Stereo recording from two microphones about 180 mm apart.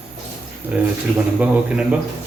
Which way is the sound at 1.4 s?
10° right (ahead or behind).